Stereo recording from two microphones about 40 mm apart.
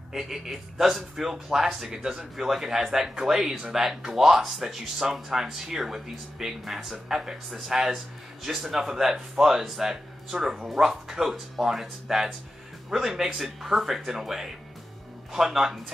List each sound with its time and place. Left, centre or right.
0.1 s speech: centre
1.9 s speech: right
2.3 s speech: centre